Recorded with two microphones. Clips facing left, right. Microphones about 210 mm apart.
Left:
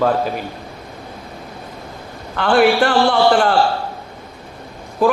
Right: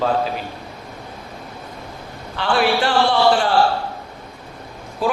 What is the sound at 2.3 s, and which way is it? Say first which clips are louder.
A man's voice: left 5 dB; 50° left (ahead or behind).